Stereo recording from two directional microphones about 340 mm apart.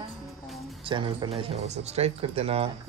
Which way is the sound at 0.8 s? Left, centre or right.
Centre.